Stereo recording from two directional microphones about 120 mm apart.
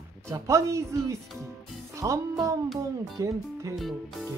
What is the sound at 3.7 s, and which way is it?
Music, centre (ahead or behind).